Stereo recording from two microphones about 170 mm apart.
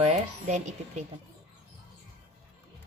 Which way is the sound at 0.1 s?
45° right (ahead or behind).